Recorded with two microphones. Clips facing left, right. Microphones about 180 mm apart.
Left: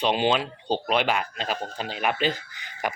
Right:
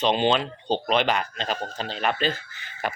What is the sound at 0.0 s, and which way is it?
Speech, 10° left (ahead or behind).